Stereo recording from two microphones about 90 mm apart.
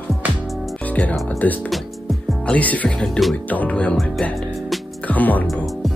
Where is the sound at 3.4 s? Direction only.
15° left (ahead or behind).